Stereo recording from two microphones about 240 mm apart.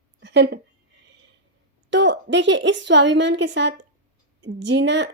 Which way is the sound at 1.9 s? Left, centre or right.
Right.